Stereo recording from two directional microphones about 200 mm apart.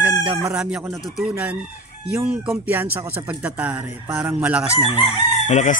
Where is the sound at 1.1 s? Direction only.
5° right (ahead or behind).